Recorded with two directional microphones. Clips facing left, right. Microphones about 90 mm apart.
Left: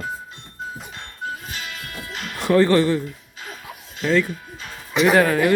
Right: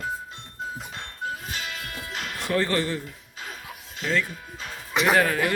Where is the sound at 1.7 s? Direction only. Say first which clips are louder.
Left 1 dB; 15° right (ahead or behind).